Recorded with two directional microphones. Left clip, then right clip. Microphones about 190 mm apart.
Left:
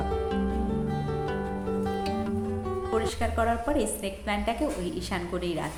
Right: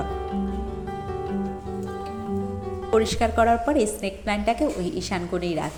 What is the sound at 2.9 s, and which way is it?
A woman's voice, 25° right (ahead or behind).